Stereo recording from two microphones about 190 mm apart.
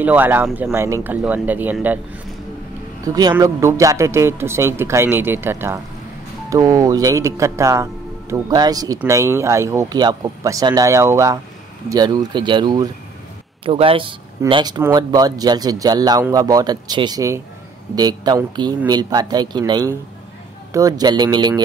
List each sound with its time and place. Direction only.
0.0 s speech: 10° right (ahead or behind)
3.1 s speech: 20° right (ahead or behind)